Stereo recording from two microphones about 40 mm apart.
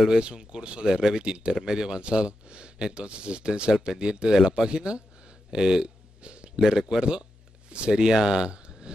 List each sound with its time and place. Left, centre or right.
0.1 s speech: right
4.4 s speech: centre
4.6 s a sound: right
6.6 s speech: centre